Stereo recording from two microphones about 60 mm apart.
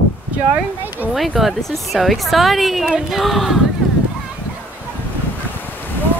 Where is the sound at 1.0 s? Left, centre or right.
Right.